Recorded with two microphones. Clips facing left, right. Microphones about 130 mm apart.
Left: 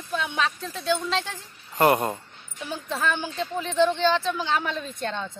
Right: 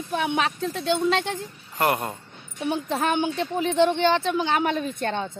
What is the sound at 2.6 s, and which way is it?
Speech, 60° right (ahead or behind).